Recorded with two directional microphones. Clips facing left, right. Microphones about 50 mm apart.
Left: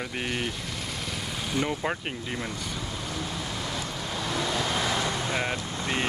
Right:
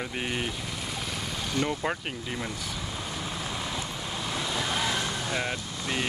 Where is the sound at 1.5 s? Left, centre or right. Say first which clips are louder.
Left 1 dB; centre.